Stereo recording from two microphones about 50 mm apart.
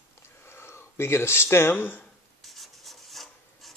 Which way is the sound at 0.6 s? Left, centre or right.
Left.